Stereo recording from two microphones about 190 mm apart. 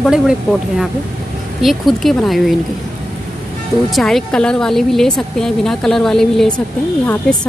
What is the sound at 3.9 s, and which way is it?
A woman's voice, centre (ahead or behind).